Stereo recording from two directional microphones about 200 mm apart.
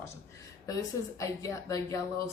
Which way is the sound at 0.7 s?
15° left (ahead or behind).